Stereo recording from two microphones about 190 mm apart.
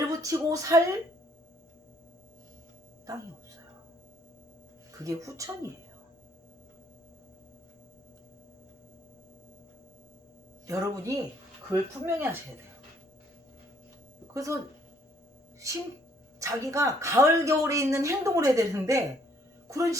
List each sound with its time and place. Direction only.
0.1 s speech: 15° right (ahead or behind)
5.0 s speech: 15° right (ahead or behind)
10.7 s speech: 15° right (ahead or behind)
14.3 s speech: 15° right (ahead or behind)
15.6 s speech: 15° right (ahead or behind)